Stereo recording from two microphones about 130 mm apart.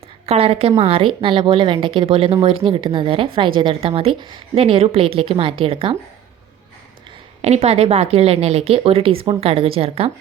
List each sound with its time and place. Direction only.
0.3 s speech: 50° right (ahead or behind)
7.4 s speech: 55° right (ahead or behind)